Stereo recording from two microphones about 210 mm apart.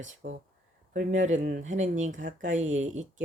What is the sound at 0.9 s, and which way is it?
Speech, 40° right (ahead or behind).